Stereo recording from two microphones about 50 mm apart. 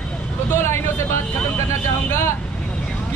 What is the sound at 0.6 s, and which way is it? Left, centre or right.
Speech, left.